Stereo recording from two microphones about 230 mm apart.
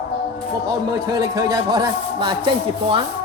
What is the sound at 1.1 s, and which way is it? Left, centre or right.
A man's voice, centre.